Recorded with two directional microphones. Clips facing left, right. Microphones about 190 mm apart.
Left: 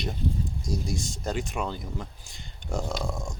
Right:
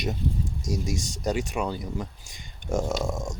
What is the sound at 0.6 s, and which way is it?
Speech, 90° right.